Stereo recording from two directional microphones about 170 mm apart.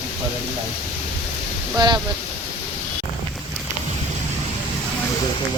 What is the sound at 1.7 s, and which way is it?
Speech, 25° right (ahead or behind).